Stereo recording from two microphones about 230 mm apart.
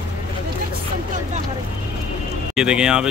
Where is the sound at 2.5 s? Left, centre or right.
Centre.